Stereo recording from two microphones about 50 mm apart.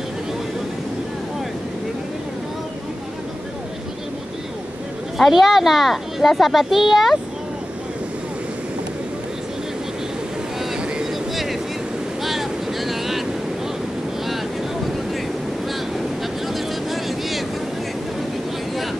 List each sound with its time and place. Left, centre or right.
5.1 s speech: centre
12.2 s boat: centre
16.4 s vehicle: centre